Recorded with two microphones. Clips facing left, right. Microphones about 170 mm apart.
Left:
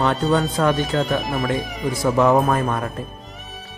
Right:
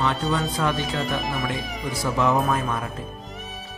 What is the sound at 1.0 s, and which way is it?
Speech, centre (ahead or behind).